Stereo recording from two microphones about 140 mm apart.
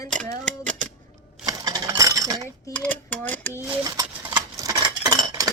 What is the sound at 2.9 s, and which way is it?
Speech, 10° left (ahead or behind).